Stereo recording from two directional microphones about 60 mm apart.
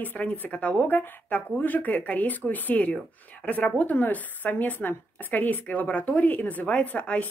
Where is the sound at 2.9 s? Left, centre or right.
Centre.